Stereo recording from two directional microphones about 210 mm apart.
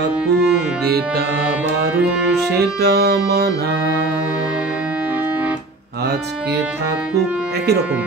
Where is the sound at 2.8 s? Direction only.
50° right (ahead or behind).